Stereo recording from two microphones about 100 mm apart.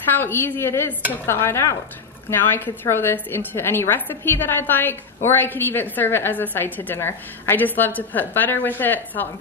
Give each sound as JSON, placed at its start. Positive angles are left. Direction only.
{"t": 0.1, "sound": "a woman's voice", "side_deg": 20}